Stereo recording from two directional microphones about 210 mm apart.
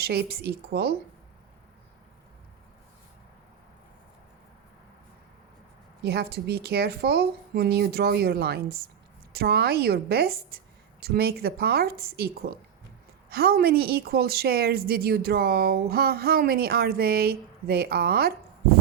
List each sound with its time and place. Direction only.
0.0 s a woman's voice: 50° right (ahead or behind)
6.0 s a woman's voice: 50° right (ahead or behind)